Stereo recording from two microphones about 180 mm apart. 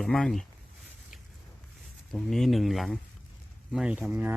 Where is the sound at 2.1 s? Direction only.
Centre (ahead or behind).